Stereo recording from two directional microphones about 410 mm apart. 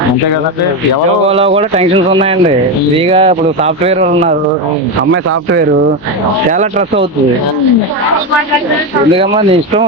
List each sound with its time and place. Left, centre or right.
1.3 s speech: centre
5.1 s speech: right
9.1 s speech: centre